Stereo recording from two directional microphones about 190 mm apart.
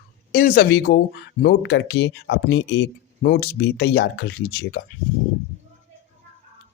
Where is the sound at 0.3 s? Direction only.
55° left (ahead or behind).